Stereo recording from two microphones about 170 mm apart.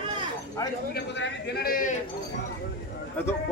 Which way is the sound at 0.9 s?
85° left.